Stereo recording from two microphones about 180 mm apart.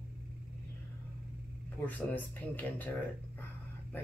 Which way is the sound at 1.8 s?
10° left (ahead or behind).